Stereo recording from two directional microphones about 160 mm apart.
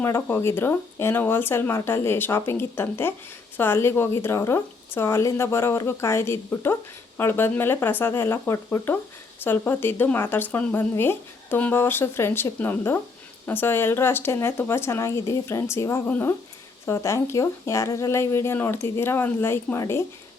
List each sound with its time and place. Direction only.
0.0 s speech: 15° left (ahead or behind)